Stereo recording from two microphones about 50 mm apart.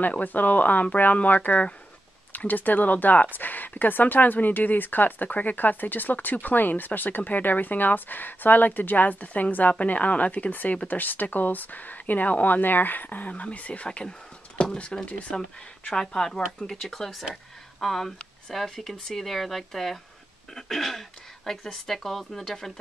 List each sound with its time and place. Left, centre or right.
0.0 s speech: left
13.8 s speech: centre
15.9 s speech: centre